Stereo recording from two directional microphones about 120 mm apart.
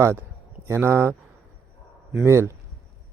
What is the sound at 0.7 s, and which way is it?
Speech, 20° right (ahead or behind).